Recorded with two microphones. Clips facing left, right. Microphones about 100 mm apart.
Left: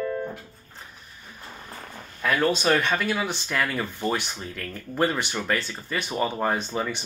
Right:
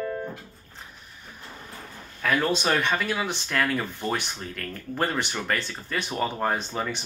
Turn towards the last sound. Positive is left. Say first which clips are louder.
# left 1 dB
turn(degrees=5)  # may be behind; listen again after turning